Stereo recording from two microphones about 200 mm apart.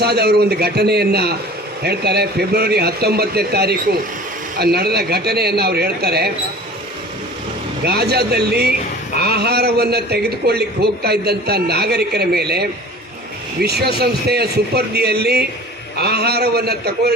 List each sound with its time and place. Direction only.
0.0 s a man's voice: 55° right (ahead or behind)
7.9 s a man's voice: 55° right (ahead or behind)